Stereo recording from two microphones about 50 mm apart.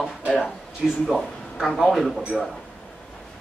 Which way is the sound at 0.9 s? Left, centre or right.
Left.